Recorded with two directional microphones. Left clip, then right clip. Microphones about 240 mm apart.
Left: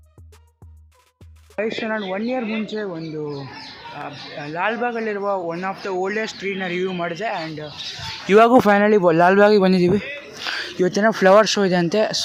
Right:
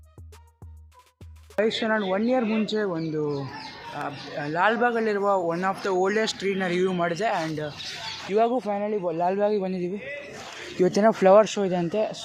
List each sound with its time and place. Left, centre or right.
1.5 s speech: centre
8.3 s speech: left
10.8 s speech: centre; by 12.2 s left